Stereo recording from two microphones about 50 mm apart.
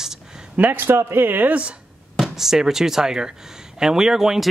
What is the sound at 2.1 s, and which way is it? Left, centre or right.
Speech, centre.